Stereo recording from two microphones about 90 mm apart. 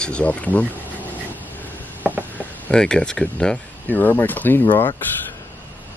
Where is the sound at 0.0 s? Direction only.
15° left (ahead or behind).